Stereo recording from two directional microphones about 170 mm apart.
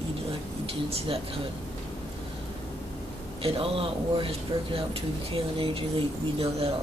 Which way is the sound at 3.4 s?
35° right (ahead or behind).